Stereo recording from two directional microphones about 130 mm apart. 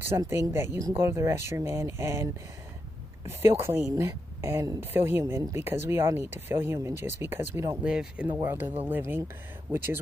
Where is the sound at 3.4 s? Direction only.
20° right (ahead or behind).